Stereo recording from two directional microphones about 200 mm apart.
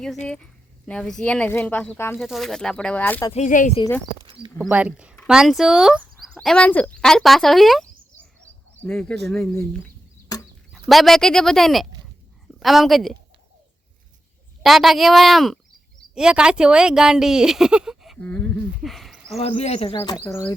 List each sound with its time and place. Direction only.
0.9 s speech: 5° left (ahead or behind)
2.1 s speech: centre (ahead or behind)
3.3 s speech: 40° left (ahead or behind)
4.4 s speech: 5° right (ahead or behind)
10.3 s a sound: 20° left (ahead or behind)
10.7 s a woman's voice: centre (ahead or behind)
14.6 s speech: centre (ahead or behind)
19.4 s speech: 30° left (ahead or behind)
20.0 s speech: 15° left (ahead or behind)